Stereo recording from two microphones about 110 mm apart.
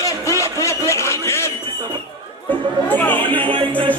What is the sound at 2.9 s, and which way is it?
Speech, 15° left (ahead or behind).